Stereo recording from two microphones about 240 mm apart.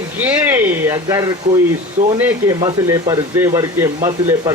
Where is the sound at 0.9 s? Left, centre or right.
Centre.